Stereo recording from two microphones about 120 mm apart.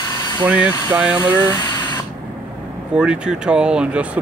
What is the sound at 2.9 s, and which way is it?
Speech, 10° right (ahead or behind).